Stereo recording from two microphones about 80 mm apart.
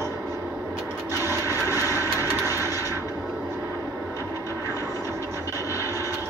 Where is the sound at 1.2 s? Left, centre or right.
Right.